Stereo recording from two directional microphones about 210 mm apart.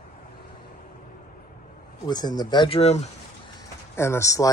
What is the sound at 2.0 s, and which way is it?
Speech, 20° left (ahead or behind).